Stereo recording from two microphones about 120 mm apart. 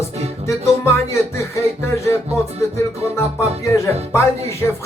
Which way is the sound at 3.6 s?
25° left (ahead or behind).